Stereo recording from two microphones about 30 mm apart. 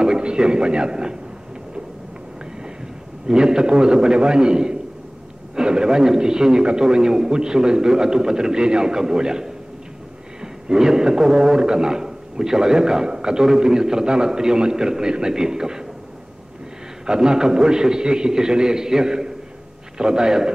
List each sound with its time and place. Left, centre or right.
0.2 s speech: right
3.3 s a man's voice: right
17.0 s a man's voice: right